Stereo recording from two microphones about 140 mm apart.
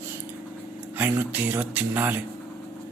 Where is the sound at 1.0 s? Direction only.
15° right (ahead or behind).